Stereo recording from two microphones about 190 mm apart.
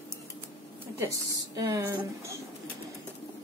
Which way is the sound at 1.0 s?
15° right (ahead or behind).